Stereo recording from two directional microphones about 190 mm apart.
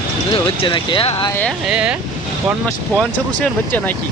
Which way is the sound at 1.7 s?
5° right (ahead or behind).